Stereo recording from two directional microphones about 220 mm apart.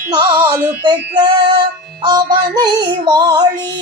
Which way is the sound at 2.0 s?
20° right (ahead or behind).